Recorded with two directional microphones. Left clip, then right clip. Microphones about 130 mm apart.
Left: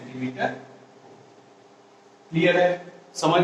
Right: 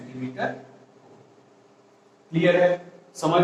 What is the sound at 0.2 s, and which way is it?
Speech, 40° right (ahead or behind).